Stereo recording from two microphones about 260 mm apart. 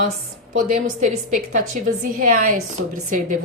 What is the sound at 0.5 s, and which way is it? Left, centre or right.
A woman's voice, right.